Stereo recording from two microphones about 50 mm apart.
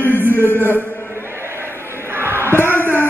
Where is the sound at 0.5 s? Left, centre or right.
Left.